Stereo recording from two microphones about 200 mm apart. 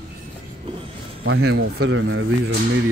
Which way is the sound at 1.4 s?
55° right (ahead or behind).